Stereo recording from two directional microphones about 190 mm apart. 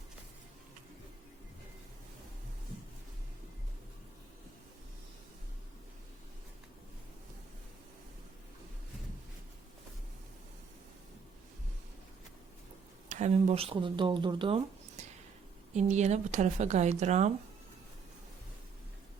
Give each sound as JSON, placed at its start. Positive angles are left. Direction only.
{"t": 13.1, "sound": "speech", "side_deg": -40}